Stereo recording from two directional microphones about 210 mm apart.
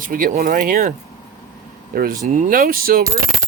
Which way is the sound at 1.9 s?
45° right (ahead or behind).